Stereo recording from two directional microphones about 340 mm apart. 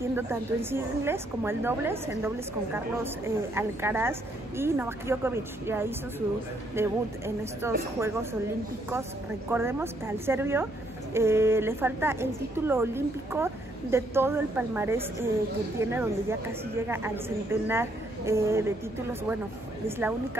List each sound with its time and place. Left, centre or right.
0.0 s a woman's voice: centre
9.5 s a woman's voice: centre